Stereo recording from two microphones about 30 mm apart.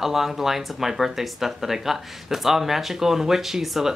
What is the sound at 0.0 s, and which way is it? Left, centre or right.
Speech, centre.